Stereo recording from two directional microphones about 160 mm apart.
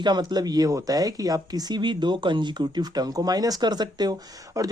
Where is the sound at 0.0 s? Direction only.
25° right (ahead or behind).